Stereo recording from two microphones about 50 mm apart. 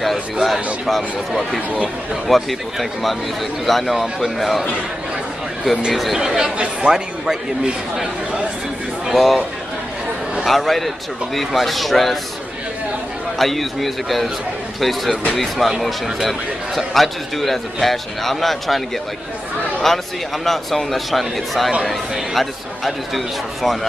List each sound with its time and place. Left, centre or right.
0.0 s a man's voice: centre
6.1 s a man's voice: centre
9.1 s a man's voice: centre
10.4 s a man's voice: centre
13.4 s a man's voice: centre
19.9 s a man's voice: centre